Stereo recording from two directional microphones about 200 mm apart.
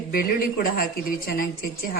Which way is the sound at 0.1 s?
45° left (ahead or behind).